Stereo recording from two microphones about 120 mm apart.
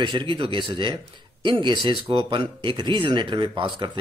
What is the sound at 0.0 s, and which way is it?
Speech, 40° right (ahead or behind).